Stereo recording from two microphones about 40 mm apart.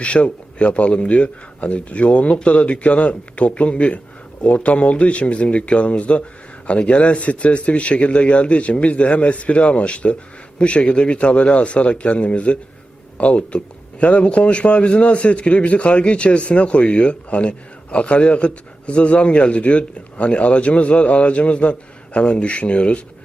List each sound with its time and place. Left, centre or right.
0.0 s a man's voice: left